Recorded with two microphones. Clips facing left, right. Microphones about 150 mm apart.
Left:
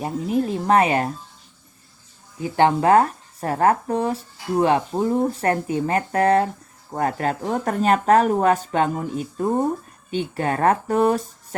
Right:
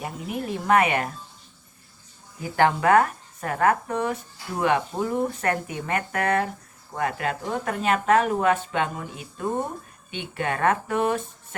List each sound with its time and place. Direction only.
0.0 s speech: 30° left (ahead or behind)
2.4 s speech: 25° left (ahead or behind)